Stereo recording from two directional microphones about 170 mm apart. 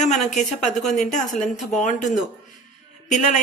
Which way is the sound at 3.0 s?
45° left (ahead or behind).